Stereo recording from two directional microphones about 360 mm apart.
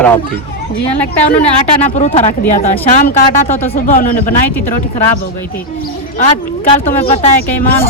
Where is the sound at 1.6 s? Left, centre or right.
Centre.